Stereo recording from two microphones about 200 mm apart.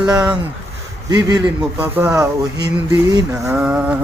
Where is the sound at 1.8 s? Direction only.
10° right (ahead or behind).